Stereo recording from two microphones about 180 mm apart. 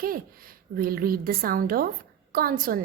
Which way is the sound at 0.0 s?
55° right (ahead or behind).